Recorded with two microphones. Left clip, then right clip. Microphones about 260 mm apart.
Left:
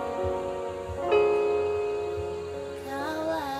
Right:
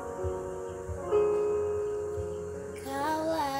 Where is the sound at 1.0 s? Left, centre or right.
Left.